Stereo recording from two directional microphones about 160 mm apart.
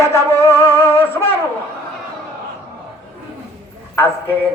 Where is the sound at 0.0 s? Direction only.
15° left (ahead or behind).